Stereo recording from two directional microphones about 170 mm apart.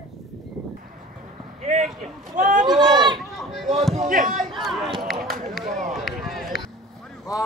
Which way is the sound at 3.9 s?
45° right (ahead or behind).